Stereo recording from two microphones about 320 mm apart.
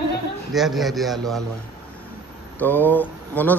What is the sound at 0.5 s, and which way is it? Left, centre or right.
Speech, centre.